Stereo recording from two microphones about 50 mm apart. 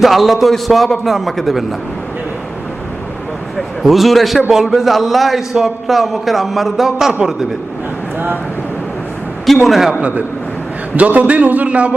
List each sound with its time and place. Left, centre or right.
0.0 s a man's voice: centre
3.8 s a man's voice: centre
9.6 s a man's voice: centre
10.9 s a man's voice: right